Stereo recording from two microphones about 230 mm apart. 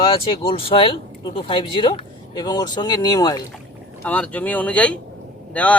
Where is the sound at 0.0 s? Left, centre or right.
Left.